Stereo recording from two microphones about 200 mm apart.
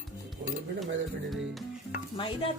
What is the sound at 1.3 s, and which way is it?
Music, centre (ahead or behind).